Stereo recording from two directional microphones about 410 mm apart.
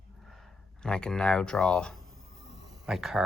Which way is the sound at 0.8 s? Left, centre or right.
Centre.